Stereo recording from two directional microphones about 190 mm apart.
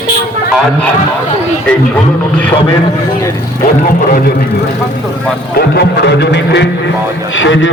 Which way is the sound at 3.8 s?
45° left (ahead or behind).